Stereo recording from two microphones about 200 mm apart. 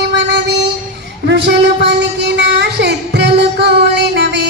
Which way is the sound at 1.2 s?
60° right (ahead or behind).